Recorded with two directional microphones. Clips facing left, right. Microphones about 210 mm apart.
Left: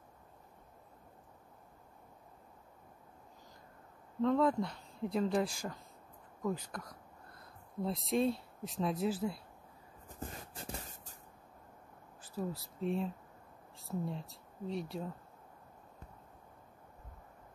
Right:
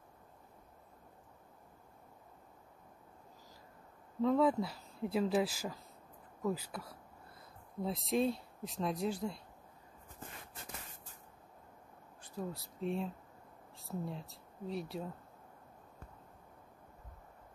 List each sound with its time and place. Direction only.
4.2 s speech: 5° right (ahead or behind)
10.2 s shuffle: 35° left (ahead or behind)
12.2 s speech: centre (ahead or behind)